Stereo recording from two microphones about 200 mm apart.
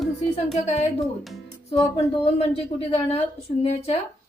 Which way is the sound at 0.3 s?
35° left (ahead or behind).